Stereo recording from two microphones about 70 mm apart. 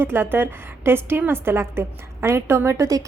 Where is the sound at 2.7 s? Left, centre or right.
Right.